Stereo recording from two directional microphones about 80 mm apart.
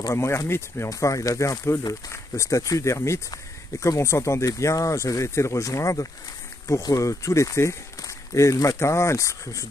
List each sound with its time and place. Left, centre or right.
0.1 s speech: left
0.8 s speech: left